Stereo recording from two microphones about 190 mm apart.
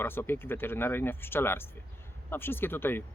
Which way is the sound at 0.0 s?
10° left (ahead or behind).